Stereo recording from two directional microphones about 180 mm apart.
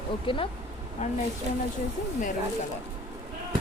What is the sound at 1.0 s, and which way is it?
Speech, 40° left (ahead or behind).